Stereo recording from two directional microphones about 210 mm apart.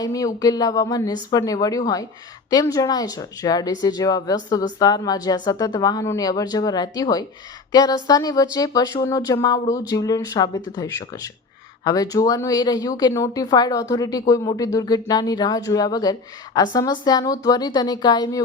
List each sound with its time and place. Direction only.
0.0 s a woman's voice: 15° left (ahead or behind)